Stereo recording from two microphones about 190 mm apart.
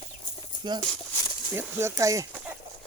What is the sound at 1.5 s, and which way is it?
Speech, 15° right (ahead or behind).